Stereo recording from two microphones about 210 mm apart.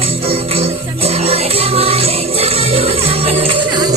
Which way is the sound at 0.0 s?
25° right (ahead or behind).